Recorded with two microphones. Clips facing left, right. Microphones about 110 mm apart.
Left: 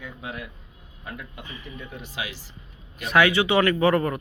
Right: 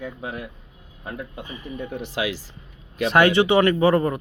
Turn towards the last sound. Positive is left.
turn(degrees=-20)  # may be behind; listen again after turning